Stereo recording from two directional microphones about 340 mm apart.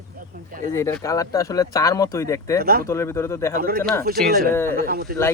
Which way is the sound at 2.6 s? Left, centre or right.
Right.